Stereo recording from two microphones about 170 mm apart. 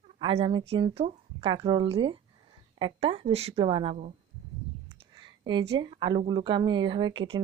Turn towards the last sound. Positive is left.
turn(degrees=-25)  # may be behind; listen again after turning